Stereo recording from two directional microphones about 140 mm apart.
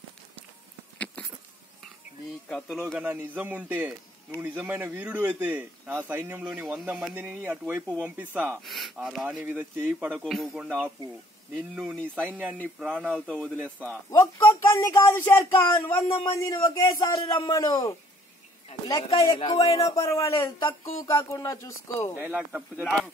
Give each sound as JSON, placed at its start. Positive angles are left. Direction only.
{"t": 0.9, "sound": "a sound", "side_deg": 10}
{"t": 2.4, "sound": "speech", "side_deg": 5}
{"t": 3.0, "sound": "speech", "side_deg": -15}
{"t": 8.5, "sound": "speech", "side_deg": 0}
{"t": 10.2, "sound": "speech", "side_deg": 0}
{"t": 12.0, "sound": "speech", "side_deg": 5}
{"t": 22.2, "sound": "speech", "side_deg": -10}